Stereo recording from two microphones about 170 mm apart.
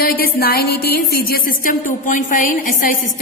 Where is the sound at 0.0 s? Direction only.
65° left (ahead or behind).